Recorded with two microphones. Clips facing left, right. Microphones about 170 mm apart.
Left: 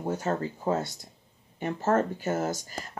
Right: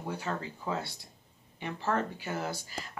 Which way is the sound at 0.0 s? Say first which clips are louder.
Left 7 dB; 45° left (ahead or behind).